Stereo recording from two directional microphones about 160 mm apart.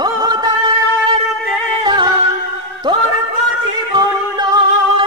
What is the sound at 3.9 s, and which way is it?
Singing, 25° right (ahead or behind).